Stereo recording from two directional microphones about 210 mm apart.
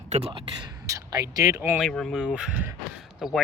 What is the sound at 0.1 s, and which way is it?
Speech, 30° right (ahead or behind).